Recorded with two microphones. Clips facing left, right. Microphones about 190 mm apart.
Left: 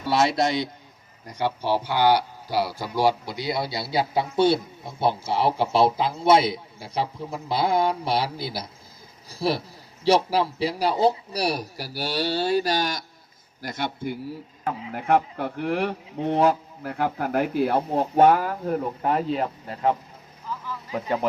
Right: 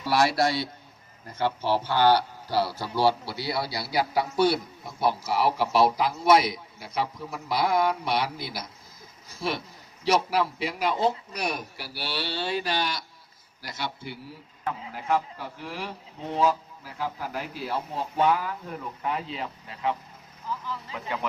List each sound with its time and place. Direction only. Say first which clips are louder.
0.1 s a man's voice: left 2 dB; 20° left (ahead or behind); by 21.2 s 40° left (ahead or behind)